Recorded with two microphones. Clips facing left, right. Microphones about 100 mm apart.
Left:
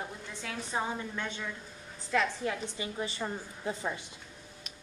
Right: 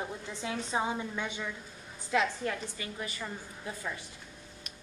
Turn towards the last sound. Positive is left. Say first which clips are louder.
# left 4 dB
turn(degrees=25)  # may be behind; listen again after turning